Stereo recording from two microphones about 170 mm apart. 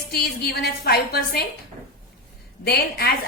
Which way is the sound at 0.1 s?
65° left (ahead or behind).